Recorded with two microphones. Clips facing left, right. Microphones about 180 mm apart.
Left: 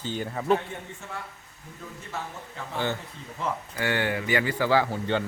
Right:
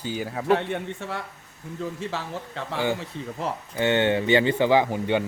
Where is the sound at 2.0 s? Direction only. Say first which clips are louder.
Right 6 dB; 90° right.